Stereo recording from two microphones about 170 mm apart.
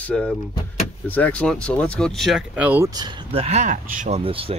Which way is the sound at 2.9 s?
30° right (ahead or behind).